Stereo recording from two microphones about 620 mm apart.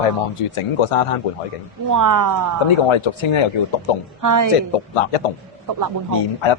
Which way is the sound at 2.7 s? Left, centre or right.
Left.